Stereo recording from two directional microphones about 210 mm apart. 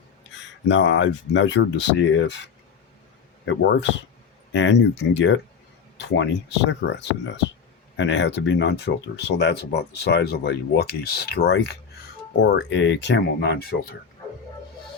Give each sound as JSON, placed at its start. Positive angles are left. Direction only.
{"t": 0.3, "sound": "speech", "side_deg": 60}
{"t": 3.4, "sound": "speech", "side_deg": 60}